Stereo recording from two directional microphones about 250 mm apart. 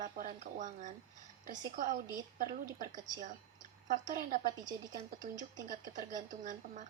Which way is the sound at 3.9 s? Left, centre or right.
Right.